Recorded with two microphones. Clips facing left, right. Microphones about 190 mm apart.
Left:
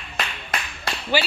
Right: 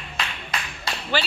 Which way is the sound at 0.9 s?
55° left (ahead or behind).